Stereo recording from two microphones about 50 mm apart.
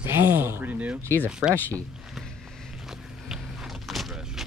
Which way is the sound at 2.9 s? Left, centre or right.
Centre.